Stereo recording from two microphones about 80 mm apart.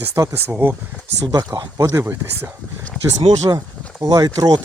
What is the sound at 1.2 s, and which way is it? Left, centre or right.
Speech, right.